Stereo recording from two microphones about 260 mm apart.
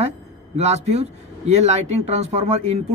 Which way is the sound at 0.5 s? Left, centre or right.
Right.